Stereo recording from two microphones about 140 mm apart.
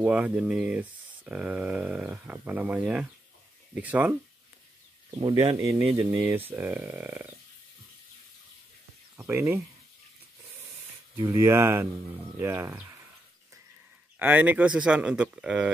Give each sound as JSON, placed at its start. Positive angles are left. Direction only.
{"t": 0.0, "sound": "speech", "side_deg": -10}
{"t": 5.2, "sound": "speech", "side_deg": -30}
{"t": 9.1, "sound": "speech", "side_deg": -20}
{"t": 11.1, "sound": "speech", "side_deg": -20}
{"t": 14.1, "sound": "speech", "side_deg": -10}